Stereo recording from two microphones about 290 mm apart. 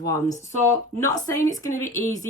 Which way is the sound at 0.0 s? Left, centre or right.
Centre.